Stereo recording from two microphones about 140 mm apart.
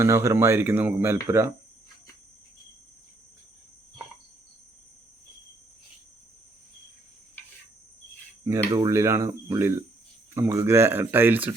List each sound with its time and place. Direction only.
0.0 s speech: 20° right (ahead or behind)
8.4 s speech: 25° right (ahead or behind)